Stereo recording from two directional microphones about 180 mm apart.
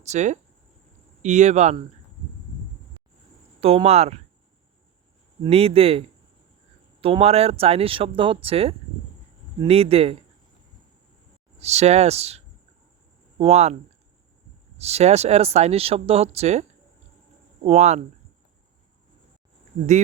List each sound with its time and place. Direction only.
0.0 s speech: 40° right (ahead or behind)
3.6 s speech: 35° right (ahead or behind)
5.4 s speech: 35° right (ahead or behind)
11.6 s speech: 35° right (ahead or behind)
13.4 s speech: 35° right (ahead or behind)
14.8 s speech: 35° right (ahead or behind)